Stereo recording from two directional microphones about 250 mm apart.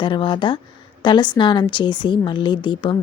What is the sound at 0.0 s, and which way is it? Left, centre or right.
A woman's voice, centre.